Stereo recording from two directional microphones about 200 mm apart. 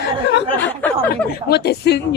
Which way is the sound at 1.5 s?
55° left (ahead or behind).